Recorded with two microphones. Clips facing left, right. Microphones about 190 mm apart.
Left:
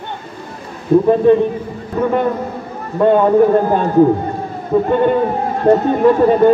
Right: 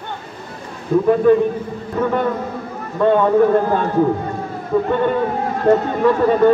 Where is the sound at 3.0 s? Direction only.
25° left (ahead or behind).